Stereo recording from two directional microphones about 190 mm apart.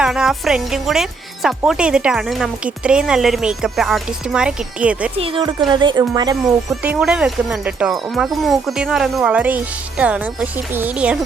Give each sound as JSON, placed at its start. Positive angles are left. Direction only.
{"t": 0.0, "sound": "speech", "side_deg": 0}
{"t": 5.1, "sound": "speech", "side_deg": -30}
{"t": 6.8, "sound": "speech", "side_deg": -5}